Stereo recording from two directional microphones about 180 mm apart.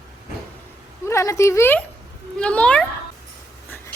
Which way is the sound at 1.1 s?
15° left (ahead or behind).